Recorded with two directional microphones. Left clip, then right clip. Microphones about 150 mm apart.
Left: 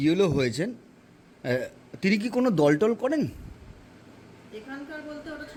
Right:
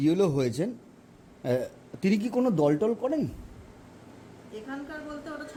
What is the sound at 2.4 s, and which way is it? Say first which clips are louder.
Speech: left 3 dB; 10° left (ahead or behind).